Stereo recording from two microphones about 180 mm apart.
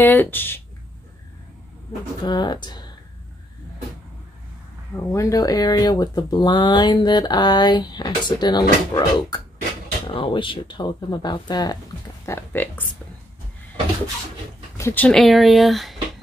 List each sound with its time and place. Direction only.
0.0 s speech: 10° left (ahead or behind)
2.2 s speech: 25° left (ahead or behind)
5.1 s speech: 20° left (ahead or behind)
12.3 s speech: 10° left (ahead or behind)
14.8 s speech: 15° left (ahead or behind)
15.0 s speech: centre (ahead or behind)